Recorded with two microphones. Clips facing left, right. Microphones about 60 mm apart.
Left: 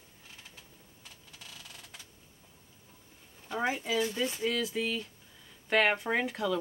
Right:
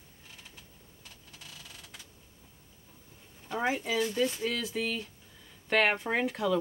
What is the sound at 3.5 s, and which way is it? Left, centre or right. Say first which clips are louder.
Speech: right 1 dB; centre.